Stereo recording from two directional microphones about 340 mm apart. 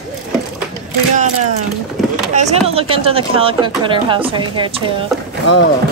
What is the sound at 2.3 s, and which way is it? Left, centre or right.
Speech, centre.